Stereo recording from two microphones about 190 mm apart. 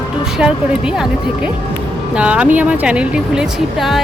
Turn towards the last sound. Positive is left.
turn(degrees=0)  # may be behind; listen again after turning